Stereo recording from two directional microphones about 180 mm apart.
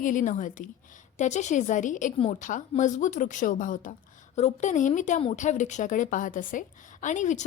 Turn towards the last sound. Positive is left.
turn(degrees=45)  # may be behind; listen again after turning